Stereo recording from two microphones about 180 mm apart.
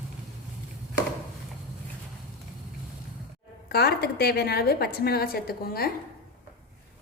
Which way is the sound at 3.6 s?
60° left (ahead or behind).